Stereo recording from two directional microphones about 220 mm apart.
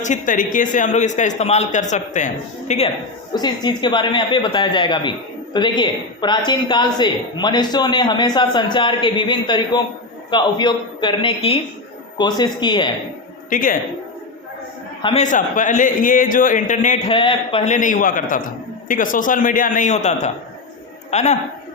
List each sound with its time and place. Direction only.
0.0 s speech: 35° left (ahead or behind)
3.3 s a woman's voice: 20° left (ahead or behind)
13.5 s speech: 40° left (ahead or behind)
15.0 s speech: 30° left (ahead or behind)
17.1 s a man's voice: 25° left (ahead or behind)